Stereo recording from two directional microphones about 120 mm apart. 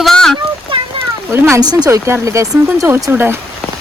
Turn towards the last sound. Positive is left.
turn(degrees=-20)  # may be behind; listen again after turning